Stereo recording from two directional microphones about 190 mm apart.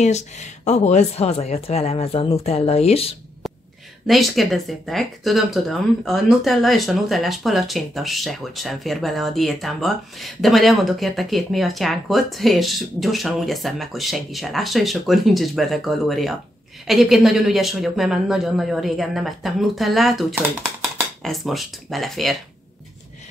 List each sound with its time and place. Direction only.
0.0 s speech: 35° left (ahead or behind)
4.1 s speech: centre (ahead or behind)